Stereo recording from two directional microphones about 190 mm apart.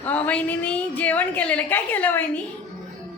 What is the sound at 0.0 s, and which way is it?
A woman's voice, 10° left (ahead or behind).